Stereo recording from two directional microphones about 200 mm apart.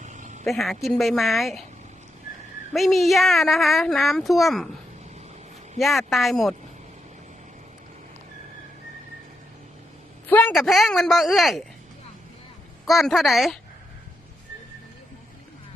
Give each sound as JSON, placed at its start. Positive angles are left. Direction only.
{"t": 0.0, "sound": "a sound", "side_deg": -35}
{"t": 0.4, "sound": "speech", "side_deg": 0}
{"t": 2.7, "sound": "speech", "side_deg": 0}
{"t": 5.8, "sound": "speech", "side_deg": 0}
{"t": 10.2, "sound": "speech", "side_deg": 10}
{"t": 12.8, "sound": "speech", "side_deg": 0}